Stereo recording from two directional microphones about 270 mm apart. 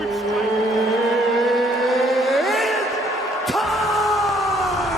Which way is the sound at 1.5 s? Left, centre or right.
Centre.